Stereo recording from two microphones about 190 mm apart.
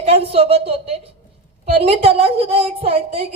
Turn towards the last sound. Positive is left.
turn(degrees=-30)  # may be behind; listen again after turning